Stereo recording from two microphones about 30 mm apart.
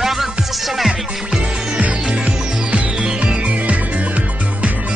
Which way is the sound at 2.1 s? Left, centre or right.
Right.